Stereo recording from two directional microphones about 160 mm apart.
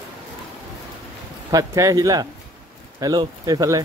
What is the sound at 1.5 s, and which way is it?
Speech, 20° right (ahead or behind).